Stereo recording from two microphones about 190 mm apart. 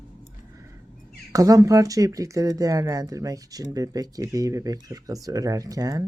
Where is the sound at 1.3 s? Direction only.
20° right (ahead or behind).